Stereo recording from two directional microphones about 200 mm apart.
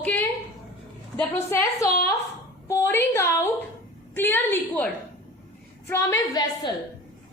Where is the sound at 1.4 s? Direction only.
15° left (ahead or behind).